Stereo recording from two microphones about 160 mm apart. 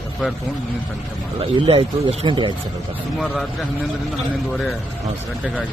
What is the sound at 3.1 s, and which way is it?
Speech, centre (ahead or behind).